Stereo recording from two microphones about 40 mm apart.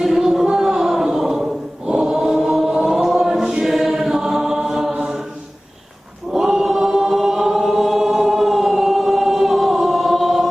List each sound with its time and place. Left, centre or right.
0.0 s a sound: centre
1.0 s choir: centre
1.9 s choir: right
2.4 s chant: centre
2.6 s chant: centre
3.0 s choir: centre
6.3 s chant: centre